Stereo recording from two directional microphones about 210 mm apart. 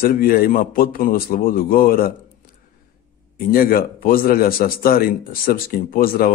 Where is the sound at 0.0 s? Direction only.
45° left (ahead or behind).